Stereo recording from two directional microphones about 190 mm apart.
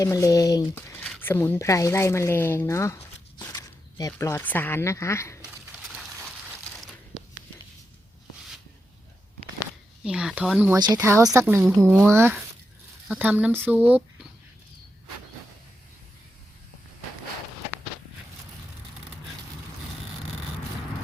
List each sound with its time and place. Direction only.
0.0 s speech: 15° left (ahead or behind)
5.4 s a sound: centre (ahead or behind)
10.0 s speech: 5° right (ahead or behind)
10.8 s speech: 20° right (ahead or behind)